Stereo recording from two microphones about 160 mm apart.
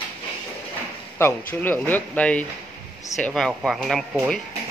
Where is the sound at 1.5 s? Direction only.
10° left (ahead or behind).